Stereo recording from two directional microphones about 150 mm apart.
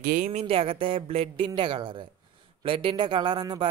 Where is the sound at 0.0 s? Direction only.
70° right (ahead or behind).